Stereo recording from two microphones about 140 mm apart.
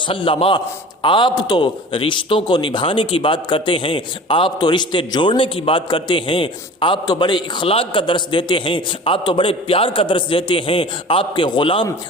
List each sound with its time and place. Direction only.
0.1 s a man's voice: 40° left (ahead or behind)